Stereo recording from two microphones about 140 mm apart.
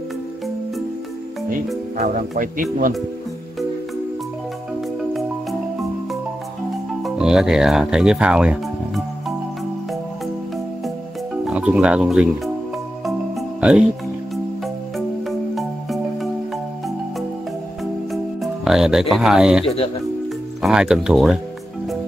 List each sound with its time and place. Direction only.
2.0 s speech: 75° right (ahead or behind)
7.0 s speech: 5° right (ahead or behind)
11.4 s speech: 5° right (ahead or behind)
13.0 s music: 5° right (ahead or behind)
15.0 s music: centre (ahead or behind)
18.1 s speech: centre (ahead or behind)
20.6 s speech: 5° right (ahead or behind)